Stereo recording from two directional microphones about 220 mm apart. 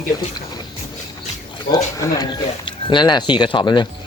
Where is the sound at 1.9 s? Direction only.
20° left (ahead or behind).